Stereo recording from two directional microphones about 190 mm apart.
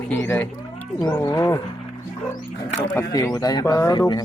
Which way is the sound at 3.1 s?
20° left (ahead or behind).